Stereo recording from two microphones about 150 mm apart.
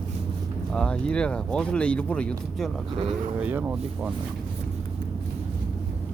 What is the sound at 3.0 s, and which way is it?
Speech, 45° right (ahead or behind).